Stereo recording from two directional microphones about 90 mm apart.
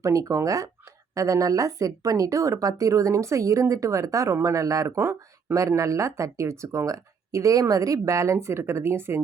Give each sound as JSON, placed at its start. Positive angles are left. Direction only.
{"t": 0.0, "sound": "speech", "side_deg": -35}